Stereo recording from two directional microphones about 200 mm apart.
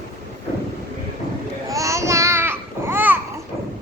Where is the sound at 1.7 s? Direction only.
15° right (ahead or behind).